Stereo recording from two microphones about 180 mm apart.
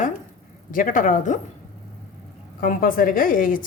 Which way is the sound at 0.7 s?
50° left (ahead or behind).